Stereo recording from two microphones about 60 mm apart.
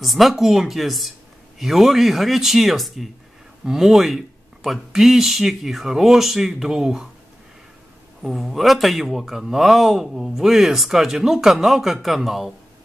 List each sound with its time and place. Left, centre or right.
0.0 s a man's voice: centre
8.2 s a man's voice: centre